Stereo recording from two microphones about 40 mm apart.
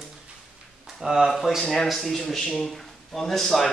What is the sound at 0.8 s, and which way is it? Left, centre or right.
Speech, centre.